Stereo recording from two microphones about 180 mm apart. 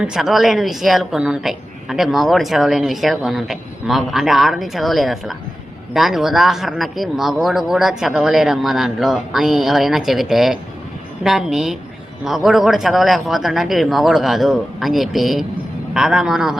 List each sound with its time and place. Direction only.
0.0 s a woman's voice: 5° right (ahead or behind)